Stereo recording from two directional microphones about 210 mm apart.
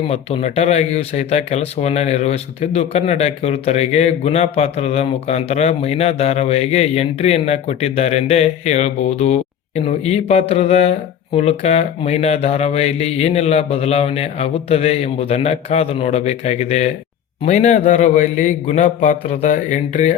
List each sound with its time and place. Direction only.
0.1 s speech: 30° left (ahead or behind)